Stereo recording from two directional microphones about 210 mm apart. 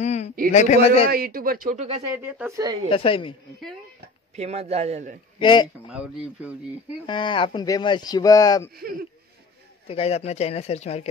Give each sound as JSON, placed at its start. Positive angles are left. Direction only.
{"t": 0.0, "sound": "a sound", "side_deg": 35}
{"t": 0.5, "sound": "a man's voice", "side_deg": 35}
{"t": 1.1, "sound": "speech", "side_deg": -45}
{"t": 2.1, "sound": "speech", "side_deg": -10}
{"t": 2.9, "sound": "speech", "side_deg": 25}
{"t": 4.4, "sound": "speech", "side_deg": -30}
{"t": 5.4, "sound": "speech", "side_deg": 20}
{"t": 5.9, "sound": "speech", "side_deg": -5}
{"t": 7.1, "sound": "speech", "side_deg": 20}
{"t": 9.8, "sound": "speech", "side_deg": 30}